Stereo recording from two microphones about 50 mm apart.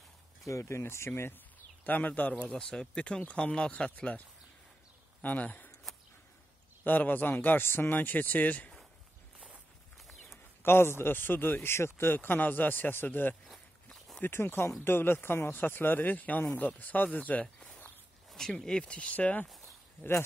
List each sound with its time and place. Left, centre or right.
0.5 s speech: left
1.9 s speech: left
2.5 s speech: centre
3.9 s speech: left
5.2 s speech: left
6.8 s speech: left
9.9 s a sound: centre
10.6 s a man's voice: left
19.4 s walk: centre